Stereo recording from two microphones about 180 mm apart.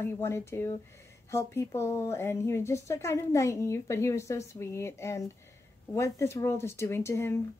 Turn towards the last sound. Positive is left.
turn(degrees=15)  # may be behind; listen again after turning